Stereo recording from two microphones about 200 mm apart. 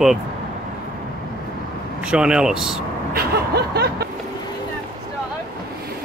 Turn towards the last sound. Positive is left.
turn(degrees=-55)  # may be behind; listen again after turning